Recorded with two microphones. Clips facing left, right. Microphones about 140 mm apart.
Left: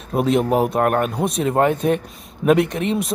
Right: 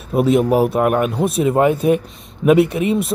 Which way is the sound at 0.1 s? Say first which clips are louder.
Right 3 dB; 5° right (ahead or behind).